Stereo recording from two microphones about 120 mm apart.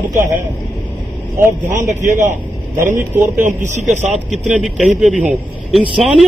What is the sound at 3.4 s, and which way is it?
Speech, 90° right.